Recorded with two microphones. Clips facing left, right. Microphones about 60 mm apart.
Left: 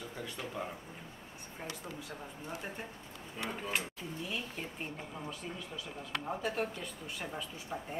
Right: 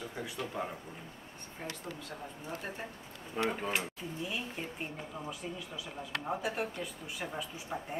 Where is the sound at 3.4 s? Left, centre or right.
Right.